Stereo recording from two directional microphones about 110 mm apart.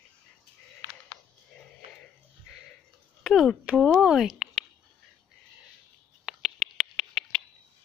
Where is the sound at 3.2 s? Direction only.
Centre (ahead or behind).